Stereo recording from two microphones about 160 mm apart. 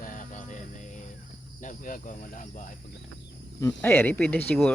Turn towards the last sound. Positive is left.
turn(degrees=10)  # may be behind; listen again after turning